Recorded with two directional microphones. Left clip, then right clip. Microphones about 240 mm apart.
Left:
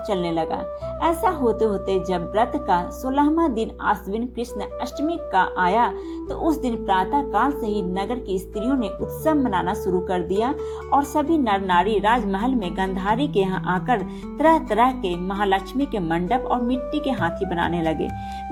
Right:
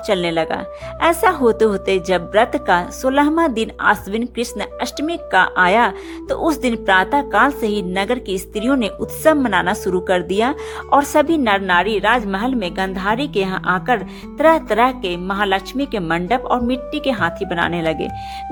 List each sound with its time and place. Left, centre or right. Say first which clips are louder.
0.1 s a woman's voice: right 6 dB; right